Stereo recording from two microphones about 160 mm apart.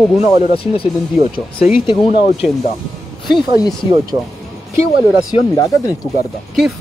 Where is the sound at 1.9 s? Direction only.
30° left (ahead or behind).